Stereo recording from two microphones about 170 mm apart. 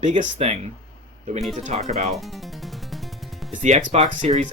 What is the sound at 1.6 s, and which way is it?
Speech, 40° right (ahead or behind).